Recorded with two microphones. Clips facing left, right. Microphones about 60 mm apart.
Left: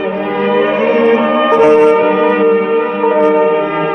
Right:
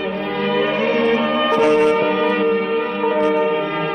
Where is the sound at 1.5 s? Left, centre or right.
Left.